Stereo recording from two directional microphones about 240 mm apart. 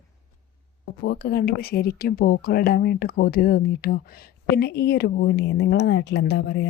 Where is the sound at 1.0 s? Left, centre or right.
Left.